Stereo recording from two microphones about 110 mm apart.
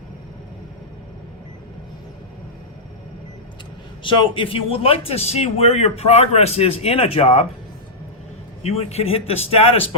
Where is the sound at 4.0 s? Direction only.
50° left (ahead or behind); by 7.5 s 65° left (ahead or behind).